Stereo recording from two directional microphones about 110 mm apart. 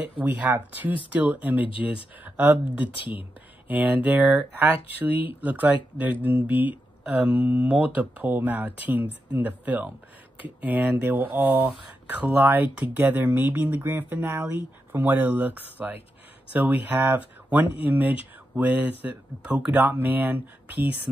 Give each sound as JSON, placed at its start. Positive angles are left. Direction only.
{"t": 0.2, "sound": "speech", "side_deg": -15}
{"t": 2.8, "sound": "speech", "side_deg": 50}
{"t": 3.6, "sound": "speech", "side_deg": -15}